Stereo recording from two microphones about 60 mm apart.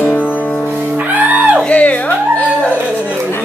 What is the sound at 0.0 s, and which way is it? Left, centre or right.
Music, left.